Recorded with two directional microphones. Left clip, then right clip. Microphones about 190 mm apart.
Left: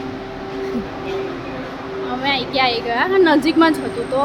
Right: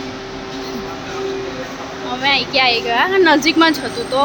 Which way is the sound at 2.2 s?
10° right (ahead or behind).